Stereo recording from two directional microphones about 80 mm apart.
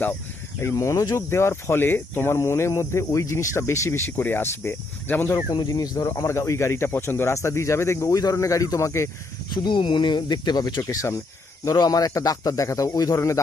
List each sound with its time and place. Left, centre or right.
0.6 s speech: left
5.3 s a man's voice: left
9.5 s speech: left
10.8 s speech: left
11.6 s a man's voice: left